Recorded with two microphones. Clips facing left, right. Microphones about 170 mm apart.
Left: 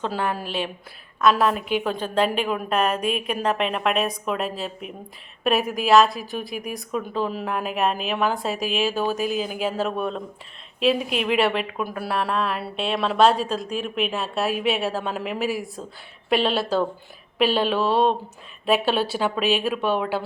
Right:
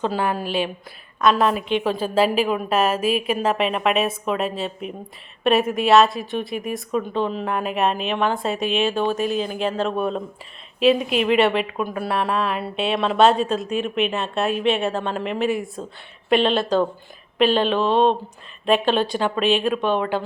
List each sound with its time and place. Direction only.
0.0 s a woman's voice: centre (ahead or behind)